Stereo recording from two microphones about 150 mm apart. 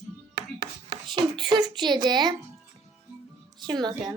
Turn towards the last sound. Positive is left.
turn(degrees=-25)  # may be behind; listen again after turning